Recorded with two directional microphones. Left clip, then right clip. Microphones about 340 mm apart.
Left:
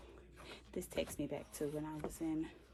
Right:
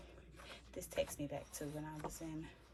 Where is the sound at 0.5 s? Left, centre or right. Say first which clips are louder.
Even; centre.